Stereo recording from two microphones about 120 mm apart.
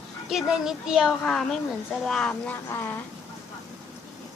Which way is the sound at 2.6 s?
15° left (ahead or behind).